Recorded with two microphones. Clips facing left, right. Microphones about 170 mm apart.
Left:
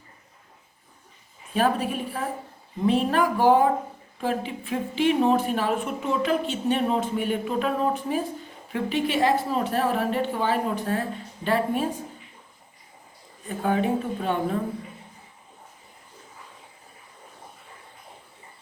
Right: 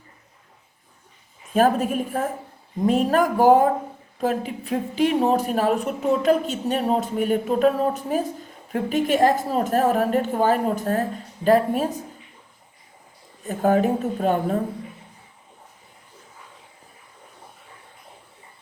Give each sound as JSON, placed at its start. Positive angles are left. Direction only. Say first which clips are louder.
{"t": 1.5, "sound": "a woman's voice", "louder": "right 5 dB", "side_deg": -45}
{"t": 13.5, "sound": "a woman's voice", "louder": "right 5 dB", "side_deg": -40}